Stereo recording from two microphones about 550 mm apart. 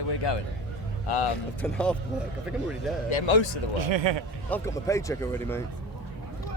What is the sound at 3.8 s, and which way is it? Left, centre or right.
Speech, right.